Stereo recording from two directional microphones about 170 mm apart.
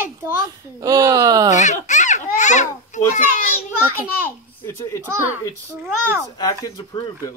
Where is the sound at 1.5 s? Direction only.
45° left (ahead or behind).